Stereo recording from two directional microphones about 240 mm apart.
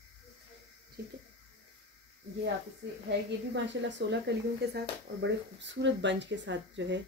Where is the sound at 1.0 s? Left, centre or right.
Right.